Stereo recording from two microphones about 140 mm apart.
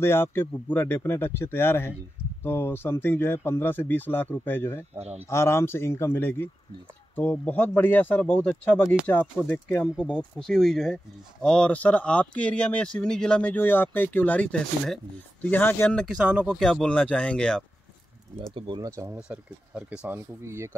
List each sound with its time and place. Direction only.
0.0 s speech: 15° left (ahead or behind)
4.9 s speech: 50° right (ahead or behind)
5.3 s speech: 20° left (ahead or behind)
16.3 s speech: 5° right (ahead or behind)
18.5 s speech: 35° right (ahead or behind)
18.8 s speech: 20° right (ahead or behind)
19.1 s speech: 5° right (ahead or behind)
20.4 s speech: 20° right (ahead or behind)